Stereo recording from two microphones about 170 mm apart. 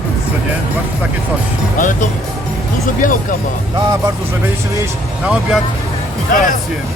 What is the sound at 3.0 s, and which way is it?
Speech, 50° left (ahead or behind).